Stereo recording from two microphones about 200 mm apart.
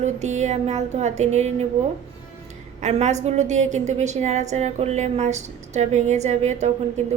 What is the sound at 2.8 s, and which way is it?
A woman's voice, 35° right (ahead or behind).